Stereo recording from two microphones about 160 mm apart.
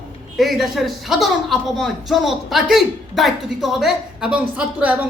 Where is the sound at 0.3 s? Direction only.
Centre (ahead or behind).